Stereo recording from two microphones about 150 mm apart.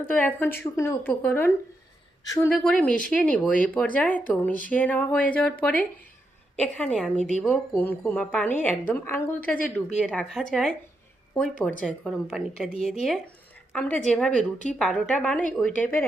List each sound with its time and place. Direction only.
0.1 s a woman's voice: 10° left (ahead or behind)
2.2 s speech: 25° left (ahead or behind)
2.5 s a woman's voice: 10° left (ahead or behind)
10.0 s a woman's voice: 5° left (ahead or behind)